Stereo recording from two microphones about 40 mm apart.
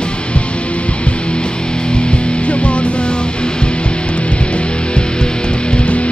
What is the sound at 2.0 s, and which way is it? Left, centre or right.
Music, left.